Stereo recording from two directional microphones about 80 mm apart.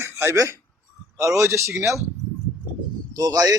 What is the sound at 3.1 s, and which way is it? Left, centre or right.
Speech, right.